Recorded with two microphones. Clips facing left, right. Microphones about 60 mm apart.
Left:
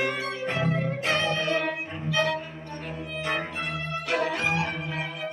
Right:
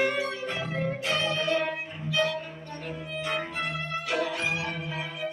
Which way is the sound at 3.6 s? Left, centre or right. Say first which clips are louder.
Left 1 dB; left.